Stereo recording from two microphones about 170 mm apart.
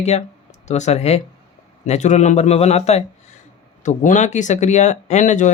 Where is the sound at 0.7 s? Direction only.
40° left (ahead or behind).